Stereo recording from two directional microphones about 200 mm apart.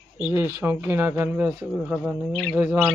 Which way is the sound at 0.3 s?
15° right (ahead or behind).